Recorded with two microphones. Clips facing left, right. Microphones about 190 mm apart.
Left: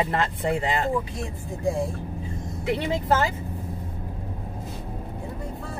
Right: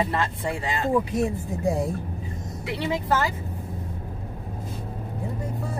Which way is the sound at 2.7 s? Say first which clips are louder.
Left 2 dB; 20° left (ahead or behind).